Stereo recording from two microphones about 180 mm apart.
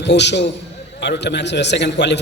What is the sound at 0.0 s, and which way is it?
A man's voice, 75° left (ahead or behind).